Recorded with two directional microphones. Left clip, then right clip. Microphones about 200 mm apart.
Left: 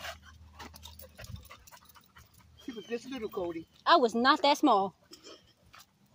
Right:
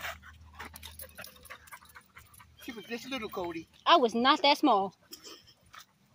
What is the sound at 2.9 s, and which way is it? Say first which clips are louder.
Speech: even; 30° right (ahead or behind).